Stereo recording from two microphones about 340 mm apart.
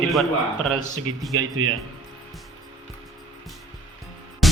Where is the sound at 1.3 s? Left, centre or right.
Right.